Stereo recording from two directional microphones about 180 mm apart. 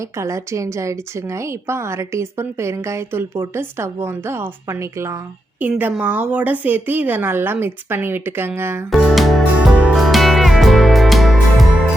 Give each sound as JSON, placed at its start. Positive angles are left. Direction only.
{"t": 0.2, "sound": "speech", "side_deg": -15}
{"t": 8.9, "sound": "music", "side_deg": 0}